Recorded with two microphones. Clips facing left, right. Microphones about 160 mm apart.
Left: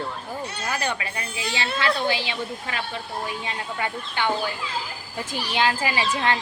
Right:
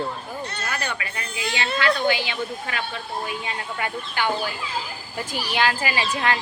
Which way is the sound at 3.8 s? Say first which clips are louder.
Right 1 dB; 25° left (ahead or behind).